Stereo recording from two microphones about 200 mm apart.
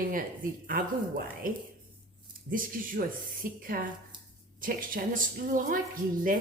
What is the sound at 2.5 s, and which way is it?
A woman's voice, 45° right (ahead or behind).